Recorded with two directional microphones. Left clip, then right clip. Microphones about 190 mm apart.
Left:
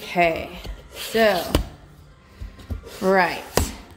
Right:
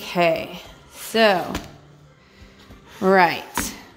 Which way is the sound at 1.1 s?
35° right (ahead or behind).